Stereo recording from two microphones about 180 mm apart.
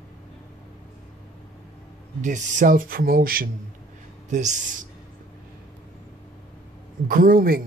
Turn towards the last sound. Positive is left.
turn(degrees=-55)  # may be behind; listen again after turning